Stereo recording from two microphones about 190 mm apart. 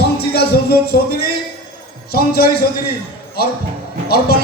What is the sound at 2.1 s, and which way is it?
Speech, 55° left (ahead or behind).